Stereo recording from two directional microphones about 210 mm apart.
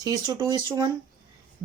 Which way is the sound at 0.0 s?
20° right (ahead or behind).